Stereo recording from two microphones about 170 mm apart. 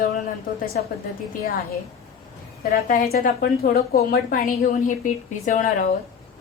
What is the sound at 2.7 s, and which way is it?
A woman's voice, 55° left (ahead or behind).